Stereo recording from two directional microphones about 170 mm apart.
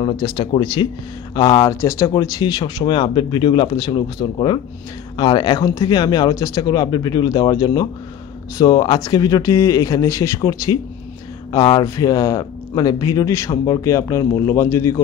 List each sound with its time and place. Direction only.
0.0 s speech: 30° left (ahead or behind)
1.8 s speech: 15° left (ahead or behind)